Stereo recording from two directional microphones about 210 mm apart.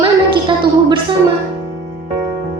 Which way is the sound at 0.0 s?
20° right (ahead or behind).